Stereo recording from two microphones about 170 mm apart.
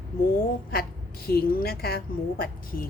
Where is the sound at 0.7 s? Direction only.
65° left (ahead or behind).